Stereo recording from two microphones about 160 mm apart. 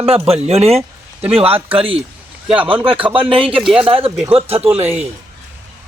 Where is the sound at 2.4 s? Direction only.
10° right (ahead or behind).